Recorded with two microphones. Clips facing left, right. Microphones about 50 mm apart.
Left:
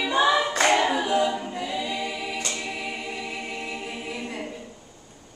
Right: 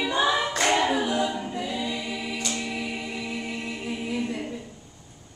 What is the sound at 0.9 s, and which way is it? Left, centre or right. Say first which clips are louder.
A capella: left 2 dB; centre.